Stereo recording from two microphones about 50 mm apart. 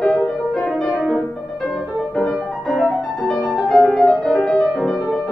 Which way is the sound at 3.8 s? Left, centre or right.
Centre.